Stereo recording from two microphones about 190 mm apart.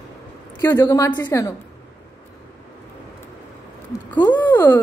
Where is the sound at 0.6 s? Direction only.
15° left (ahead or behind).